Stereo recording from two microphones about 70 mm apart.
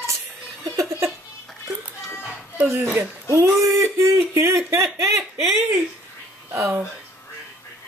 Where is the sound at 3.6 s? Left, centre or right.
Right.